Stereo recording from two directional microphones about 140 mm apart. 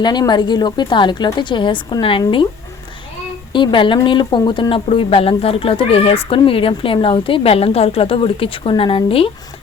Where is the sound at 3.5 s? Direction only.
35° left (ahead or behind).